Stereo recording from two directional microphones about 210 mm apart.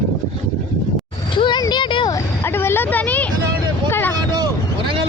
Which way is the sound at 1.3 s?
20° left (ahead or behind).